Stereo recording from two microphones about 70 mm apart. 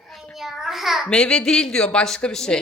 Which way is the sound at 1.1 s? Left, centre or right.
Centre.